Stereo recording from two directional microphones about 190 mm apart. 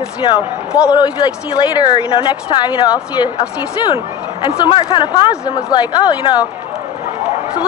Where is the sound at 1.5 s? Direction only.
25° left (ahead or behind).